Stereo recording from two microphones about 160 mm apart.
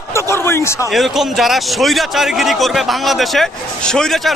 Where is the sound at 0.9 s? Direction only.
Centre (ahead or behind).